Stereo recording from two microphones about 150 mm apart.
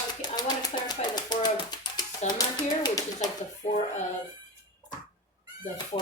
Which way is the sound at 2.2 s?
50° left (ahead or behind).